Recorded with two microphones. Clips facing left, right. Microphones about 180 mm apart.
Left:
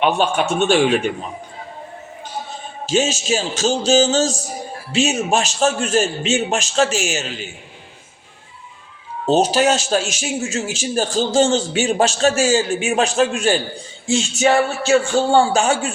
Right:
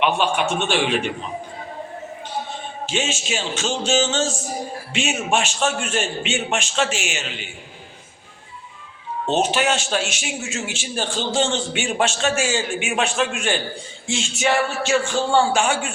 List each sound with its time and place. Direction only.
0.0 s a man's voice: 40° left (ahead or behind)
2.8 s a man's voice: 40° left (ahead or behind)
9.2 s a man's voice: 35° left (ahead or behind)